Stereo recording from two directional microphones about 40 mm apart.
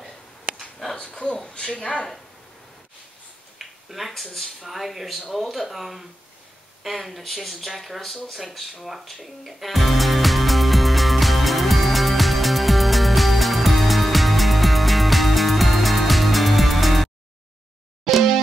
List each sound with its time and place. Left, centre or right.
0.9 s speech: left
3.5 s a sound: centre
4.1 s speech: centre
8.4 s music: centre